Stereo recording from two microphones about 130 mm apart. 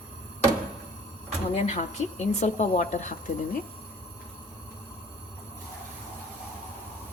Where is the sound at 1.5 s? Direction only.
55° left (ahead or behind).